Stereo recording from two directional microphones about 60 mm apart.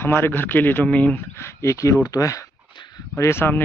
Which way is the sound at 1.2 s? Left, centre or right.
Left.